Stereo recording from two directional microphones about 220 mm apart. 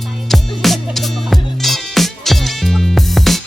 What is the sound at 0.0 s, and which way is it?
Music, centre (ahead or behind).